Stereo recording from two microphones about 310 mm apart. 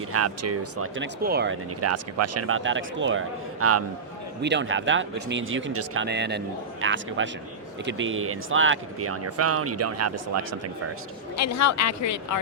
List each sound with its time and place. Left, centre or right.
0.1 s speech: right
1.8 s speech: right
4.4 s speech: right
11.3 s a woman's voice: left